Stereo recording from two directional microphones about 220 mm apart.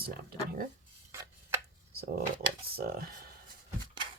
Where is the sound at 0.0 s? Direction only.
45° right (ahead or behind).